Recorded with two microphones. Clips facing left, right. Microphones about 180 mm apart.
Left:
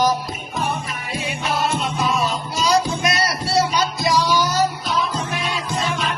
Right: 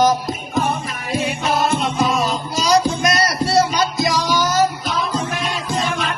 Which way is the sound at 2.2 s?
40° right (ahead or behind).